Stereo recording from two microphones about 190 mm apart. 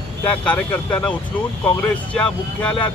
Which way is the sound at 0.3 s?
5° left (ahead or behind).